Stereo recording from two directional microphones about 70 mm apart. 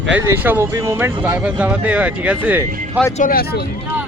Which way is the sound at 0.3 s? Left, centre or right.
Right.